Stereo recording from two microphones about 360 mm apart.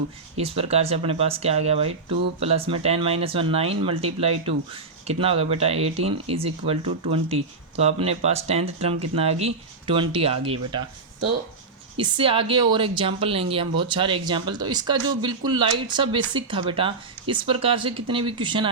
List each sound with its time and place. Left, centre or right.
0.3 s speech: centre
11.9 s speech: centre